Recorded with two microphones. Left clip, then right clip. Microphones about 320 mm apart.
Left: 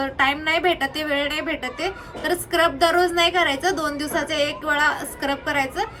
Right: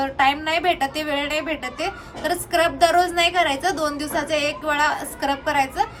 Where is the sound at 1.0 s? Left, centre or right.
Right.